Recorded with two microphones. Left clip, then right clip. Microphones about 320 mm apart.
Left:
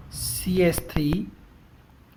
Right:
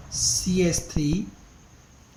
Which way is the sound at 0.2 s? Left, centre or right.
Left.